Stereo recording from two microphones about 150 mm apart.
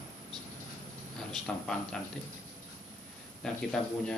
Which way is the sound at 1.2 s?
5° left (ahead or behind).